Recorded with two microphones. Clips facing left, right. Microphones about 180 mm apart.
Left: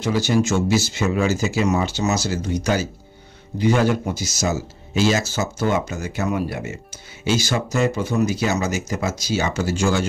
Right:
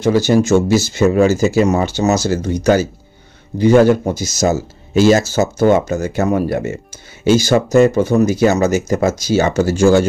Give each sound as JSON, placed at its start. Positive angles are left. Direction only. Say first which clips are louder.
{"t": 0.0, "sound": "speech", "louder": "right 7 dB", "side_deg": -45}